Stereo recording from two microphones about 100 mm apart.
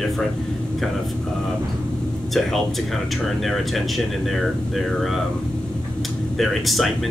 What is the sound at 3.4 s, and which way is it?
Speech, centre (ahead or behind).